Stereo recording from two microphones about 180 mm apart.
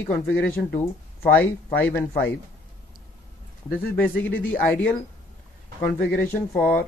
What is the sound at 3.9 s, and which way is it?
Speech, 10° left (ahead or behind).